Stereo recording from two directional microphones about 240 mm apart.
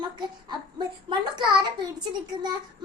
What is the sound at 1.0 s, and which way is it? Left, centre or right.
Speech, centre.